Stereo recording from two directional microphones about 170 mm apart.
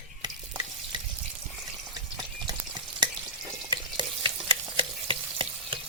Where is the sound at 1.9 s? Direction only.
25° right (ahead or behind).